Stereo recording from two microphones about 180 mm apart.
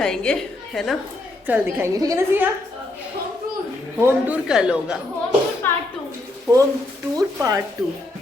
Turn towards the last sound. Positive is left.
turn(degrees=-20)  # may be behind; listen again after turning